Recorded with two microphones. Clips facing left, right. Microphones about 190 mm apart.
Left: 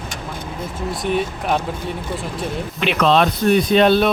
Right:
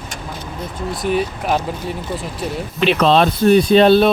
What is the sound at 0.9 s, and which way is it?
Speech, centre (ahead or behind).